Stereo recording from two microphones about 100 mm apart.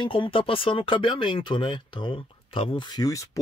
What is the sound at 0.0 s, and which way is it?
Speech, 60° left (ahead or behind).